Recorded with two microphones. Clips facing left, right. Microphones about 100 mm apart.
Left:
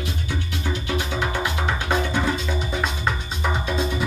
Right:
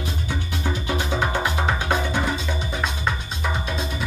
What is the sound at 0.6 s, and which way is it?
Music, 25° right (ahead or behind).